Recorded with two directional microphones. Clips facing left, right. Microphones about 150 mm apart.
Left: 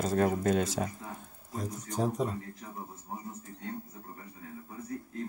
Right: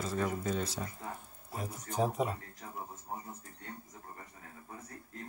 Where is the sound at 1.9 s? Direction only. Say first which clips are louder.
Left 1 dB; 10° right (ahead or behind).